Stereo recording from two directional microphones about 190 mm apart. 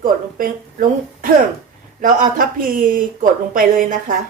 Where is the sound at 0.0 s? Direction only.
50° right (ahead or behind).